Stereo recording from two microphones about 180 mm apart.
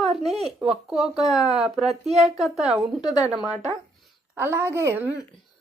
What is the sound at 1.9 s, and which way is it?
Speech, 35° right (ahead or behind).